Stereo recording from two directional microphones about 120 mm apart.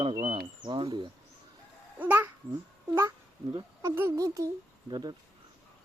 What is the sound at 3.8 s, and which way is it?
Speech, 20° right (ahead or behind).